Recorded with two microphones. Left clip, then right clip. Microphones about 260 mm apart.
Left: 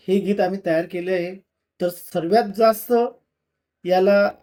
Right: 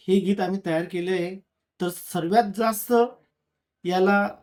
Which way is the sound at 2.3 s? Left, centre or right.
Centre.